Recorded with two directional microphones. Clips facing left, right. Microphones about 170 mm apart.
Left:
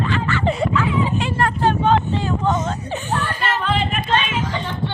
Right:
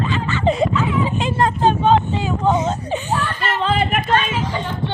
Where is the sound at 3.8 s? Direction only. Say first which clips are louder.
Right 4 dB; 60° right (ahead or behind).